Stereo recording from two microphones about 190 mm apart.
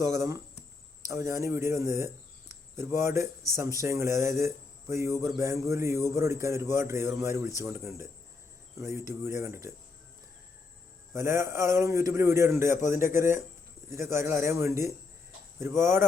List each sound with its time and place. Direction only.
0.0 s speech: 15° right (ahead or behind)
11.1 s speech: 15° right (ahead or behind)